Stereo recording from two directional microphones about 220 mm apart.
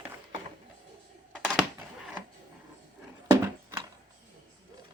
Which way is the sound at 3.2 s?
15° right (ahead or behind).